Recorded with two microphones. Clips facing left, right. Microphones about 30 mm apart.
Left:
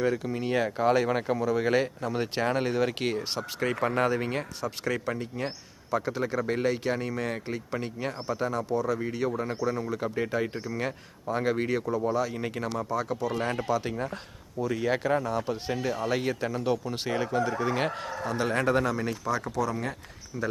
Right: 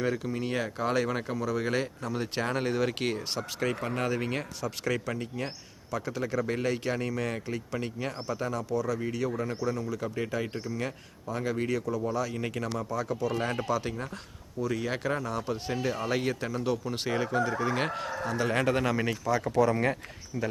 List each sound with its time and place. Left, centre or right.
0.0 s speech: centre
2.4 s speech: centre
5.9 s speech: centre
12.3 s speech: centre
15.7 s speech: centre
18.5 s speech: centre
19.5 s speech: right
20.3 s speech: centre